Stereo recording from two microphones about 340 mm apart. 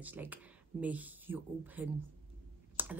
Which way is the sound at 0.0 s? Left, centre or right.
Centre.